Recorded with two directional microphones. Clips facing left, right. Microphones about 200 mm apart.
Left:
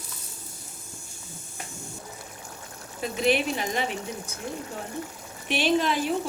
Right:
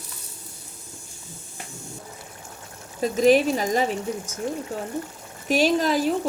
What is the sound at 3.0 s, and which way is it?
Speech, 40° right (ahead or behind).